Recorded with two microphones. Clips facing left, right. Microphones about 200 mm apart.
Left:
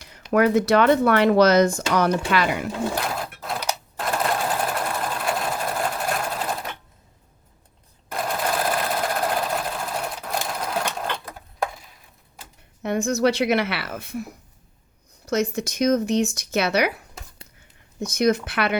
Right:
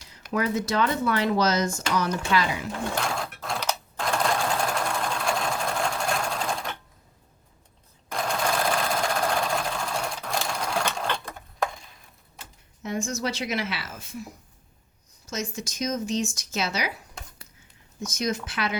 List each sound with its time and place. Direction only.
0.3 s speech: 65° left (ahead or behind)
2.9 s sewing machine: 5° left (ahead or behind)
8.1 s sewing machine: 5° left (ahead or behind)
12.8 s speech: 65° left (ahead or behind)
15.3 s speech: 65° left (ahead or behind)
18.0 s speech: 60° left (ahead or behind)